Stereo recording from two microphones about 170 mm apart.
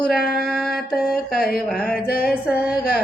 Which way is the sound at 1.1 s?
60° left (ahead or behind).